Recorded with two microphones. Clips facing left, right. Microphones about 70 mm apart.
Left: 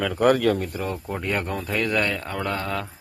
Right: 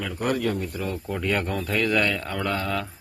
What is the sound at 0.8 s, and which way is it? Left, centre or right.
Speech, left.